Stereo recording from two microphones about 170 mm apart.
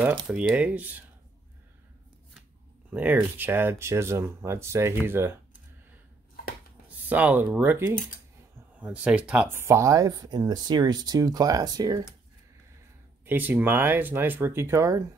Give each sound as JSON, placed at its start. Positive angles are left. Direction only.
{"t": 0.3, "sound": "speech", "side_deg": -5}
{"t": 2.9, "sound": "speech", "side_deg": -10}
{"t": 7.1, "sound": "speech", "side_deg": -10}
{"t": 13.2, "sound": "speech", "side_deg": -10}